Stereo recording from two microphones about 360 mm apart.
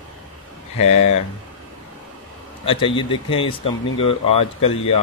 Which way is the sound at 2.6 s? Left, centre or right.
Centre.